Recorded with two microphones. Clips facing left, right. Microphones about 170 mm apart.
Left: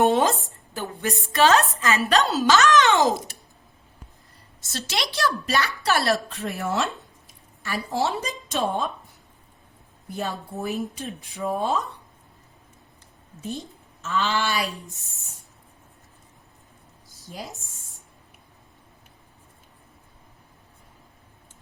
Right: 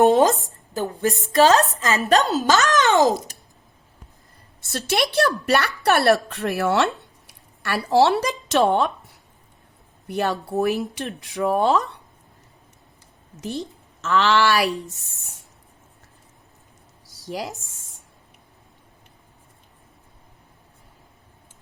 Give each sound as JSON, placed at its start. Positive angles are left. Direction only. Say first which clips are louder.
{"t": 0.0, "sound": "a child's voice", "louder": "right 4 dB", "side_deg": -40}
{"t": 4.6, "sound": "a woman's voice", "louder": "right 7 dB", "side_deg": -60}
{"t": 13.4, "sound": "a woman's voice", "louder": "right 4 dB", "side_deg": -80}
{"t": 17.2, "sound": "speech", "louder": "right 8 dB", "side_deg": -80}